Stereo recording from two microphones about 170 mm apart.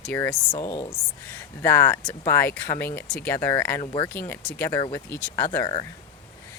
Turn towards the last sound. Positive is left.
turn(degrees=15)  # may be behind; listen again after turning